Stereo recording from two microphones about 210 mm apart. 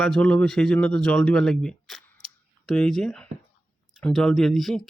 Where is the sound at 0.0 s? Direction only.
5° left (ahead or behind).